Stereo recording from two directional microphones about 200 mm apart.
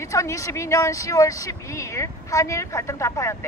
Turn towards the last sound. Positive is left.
turn(degrees=15)  # may be behind; listen again after turning